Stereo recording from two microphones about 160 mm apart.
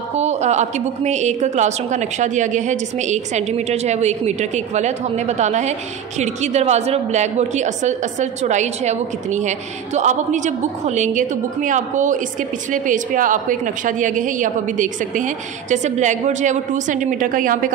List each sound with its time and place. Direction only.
0.1 s a woman's voice: 45° right (ahead or behind)